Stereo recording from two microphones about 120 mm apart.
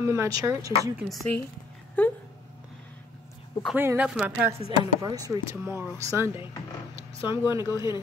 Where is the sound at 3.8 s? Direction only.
20° right (ahead or behind).